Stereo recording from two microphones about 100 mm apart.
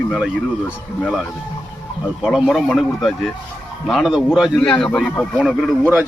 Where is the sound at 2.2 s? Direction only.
Centre (ahead or behind).